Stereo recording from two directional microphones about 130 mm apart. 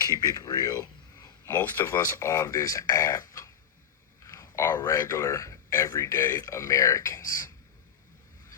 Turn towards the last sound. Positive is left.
turn(degrees=25)  # may be behind; listen again after turning